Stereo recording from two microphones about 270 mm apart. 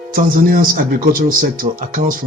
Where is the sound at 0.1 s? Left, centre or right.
Right.